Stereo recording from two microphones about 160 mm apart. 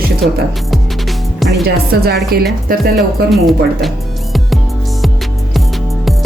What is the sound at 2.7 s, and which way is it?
Speech, 65° right (ahead or behind).